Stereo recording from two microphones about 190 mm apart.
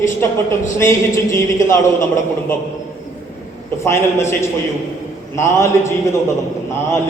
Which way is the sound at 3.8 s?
15° left (ahead or behind).